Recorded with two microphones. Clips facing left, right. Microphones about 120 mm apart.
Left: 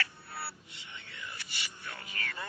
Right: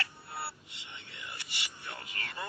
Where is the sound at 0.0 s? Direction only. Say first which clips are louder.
Even; 20° right (ahead or behind).